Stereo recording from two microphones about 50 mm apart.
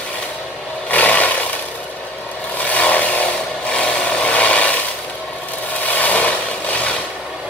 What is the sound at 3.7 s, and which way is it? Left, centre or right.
Wood, left.